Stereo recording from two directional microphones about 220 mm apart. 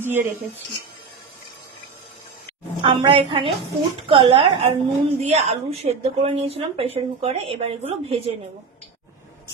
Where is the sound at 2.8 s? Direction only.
25° right (ahead or behind).